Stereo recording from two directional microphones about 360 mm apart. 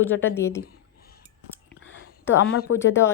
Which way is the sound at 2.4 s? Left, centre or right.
Left.